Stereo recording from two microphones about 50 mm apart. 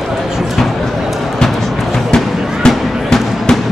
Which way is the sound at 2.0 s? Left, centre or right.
Centre.